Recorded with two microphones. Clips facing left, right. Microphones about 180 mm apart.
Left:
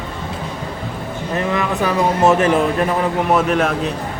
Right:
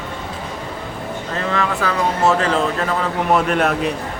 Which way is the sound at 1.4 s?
15° left (ahead or behind).